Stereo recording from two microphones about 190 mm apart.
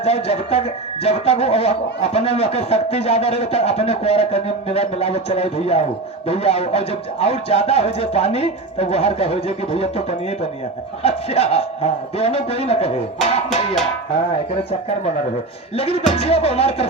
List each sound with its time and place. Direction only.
0.0 s speech: 30° left (ahead or behind)